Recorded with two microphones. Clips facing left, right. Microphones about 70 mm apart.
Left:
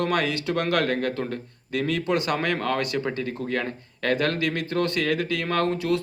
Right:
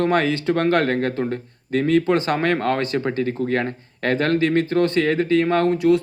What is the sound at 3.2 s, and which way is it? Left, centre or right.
Speech, right.